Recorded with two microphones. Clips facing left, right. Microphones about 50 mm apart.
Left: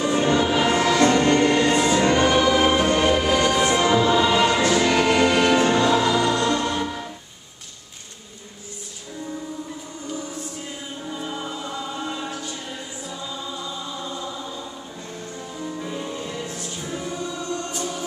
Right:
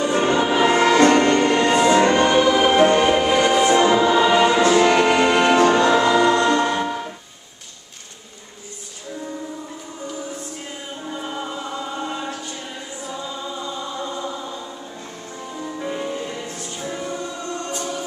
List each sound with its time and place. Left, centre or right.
0.1 s music: centre
0.7 s music: right
1.0 s music: right
1.3 s music: centre
1.9 s music: right
2.1 s music: centre
2.7 s music: right
5.7 s music: right
6.0 s music: right
11.1 s music: centre
14.0 s chant: centre
15.6 s music: centre